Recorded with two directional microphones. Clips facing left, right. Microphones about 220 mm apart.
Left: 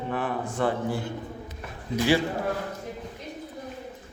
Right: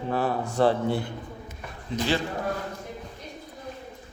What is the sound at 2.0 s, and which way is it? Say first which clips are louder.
Speech: left 4 dB; 10° left (ahead or behind).